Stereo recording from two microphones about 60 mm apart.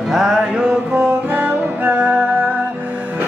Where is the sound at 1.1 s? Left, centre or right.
Right.